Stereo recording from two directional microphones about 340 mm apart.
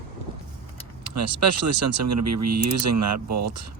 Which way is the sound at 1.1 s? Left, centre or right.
Right.